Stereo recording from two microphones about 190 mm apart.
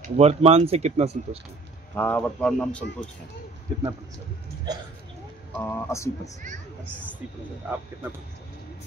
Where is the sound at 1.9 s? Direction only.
10° left (ahead or behind).